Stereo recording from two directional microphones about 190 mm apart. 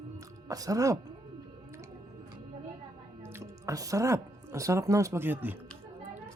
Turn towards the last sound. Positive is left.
turn(degrees=-10)  # may be behind; listen again after turning